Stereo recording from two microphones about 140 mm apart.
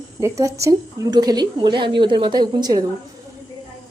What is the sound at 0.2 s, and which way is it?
Speech, 20° right (ahead or behind).